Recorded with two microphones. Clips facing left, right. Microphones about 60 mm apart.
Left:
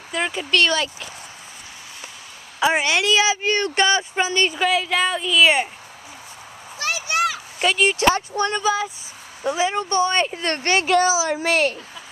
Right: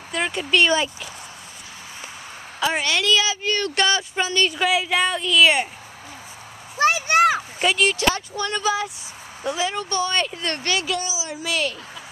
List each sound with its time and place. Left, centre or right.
0.1 s a woman's voice: centre
0.5 s speech: centre
2.6 s speech: centre
3.7 s speech: centre
4.6 s a woman's voice: centre
6.8 s a sound: right
7.6 s speech: centre
7.9 s speech: left
8.6 s a woman's voice: centre
9.6 s speech: left
11.0 s speech: left